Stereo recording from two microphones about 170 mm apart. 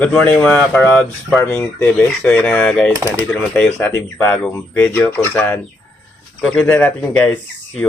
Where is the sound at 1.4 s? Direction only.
15° left (ahead or behind).